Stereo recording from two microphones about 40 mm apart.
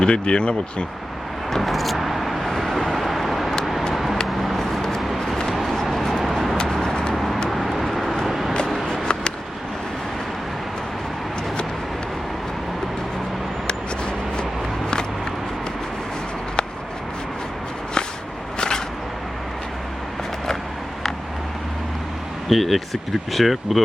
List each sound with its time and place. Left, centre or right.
0.0 s speech: left
1.5 s vehicle: centre
4.9 s a sound: centre
5.7 s vehicle: centre
6.8 s vehicle: left
7.1 s vehicle: centre
8.9 s vehicle: left
22.4 s speech: centre